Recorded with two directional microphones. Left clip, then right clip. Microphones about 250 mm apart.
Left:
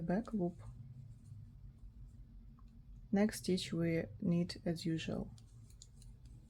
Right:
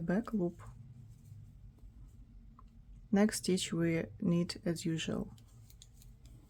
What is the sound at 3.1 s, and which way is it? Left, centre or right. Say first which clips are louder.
Speech: right 4 dB; centre.